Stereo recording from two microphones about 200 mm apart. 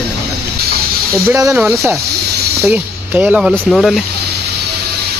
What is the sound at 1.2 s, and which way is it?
Speech, 15° right (ahead or behind).